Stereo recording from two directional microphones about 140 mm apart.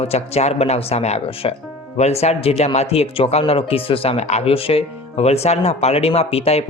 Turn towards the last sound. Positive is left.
turn(degrees=45)  # may be behind; listen again after turning